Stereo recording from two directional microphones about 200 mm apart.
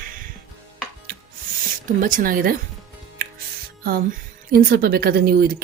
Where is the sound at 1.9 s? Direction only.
45° right (ahead or behind).